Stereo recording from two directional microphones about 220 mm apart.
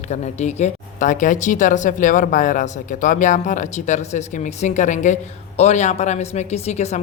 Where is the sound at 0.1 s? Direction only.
30° left (ahead or behind).